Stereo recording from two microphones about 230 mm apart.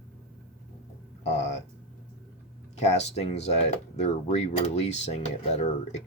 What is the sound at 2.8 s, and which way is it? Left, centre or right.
Speech, left.